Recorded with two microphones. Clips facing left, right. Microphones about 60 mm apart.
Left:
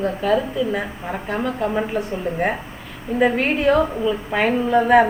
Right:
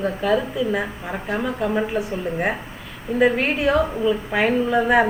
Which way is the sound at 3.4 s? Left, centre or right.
Left.